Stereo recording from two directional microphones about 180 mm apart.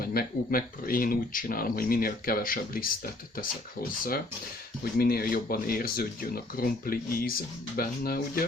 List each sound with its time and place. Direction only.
0.0 s speech: 55° left (ahead or behind)
4.9 s speech: 55° left (ahead or behind)